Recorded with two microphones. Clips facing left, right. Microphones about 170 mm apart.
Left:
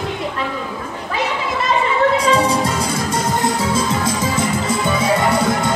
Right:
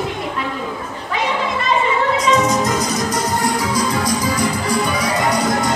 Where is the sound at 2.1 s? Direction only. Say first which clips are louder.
Even; 30° left (ahead or behind).